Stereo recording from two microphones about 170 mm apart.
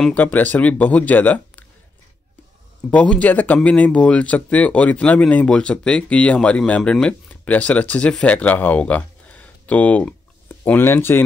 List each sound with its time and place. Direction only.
0.0 s speech: 10° left (ahead or behind)
2.9 s speech: 10° left (ahead or behind)